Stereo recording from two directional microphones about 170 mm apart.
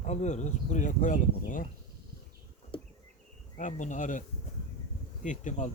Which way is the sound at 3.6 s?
45° left (ahead or behind).